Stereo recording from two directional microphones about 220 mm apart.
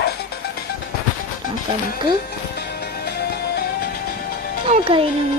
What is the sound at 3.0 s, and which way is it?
Music, 45° left (ahead or behind).